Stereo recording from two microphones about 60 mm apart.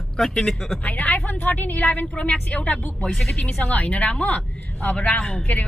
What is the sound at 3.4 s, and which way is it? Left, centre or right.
Speech, left.